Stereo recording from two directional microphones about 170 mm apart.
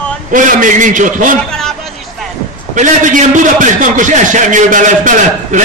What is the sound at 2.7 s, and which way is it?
A man's voice, 50° right (ahead or behind).